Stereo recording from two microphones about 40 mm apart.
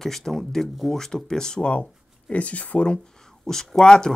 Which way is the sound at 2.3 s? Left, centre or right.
Left.